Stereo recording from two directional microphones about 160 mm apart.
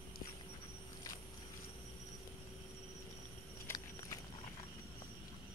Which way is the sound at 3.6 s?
25° left (ahead or behind).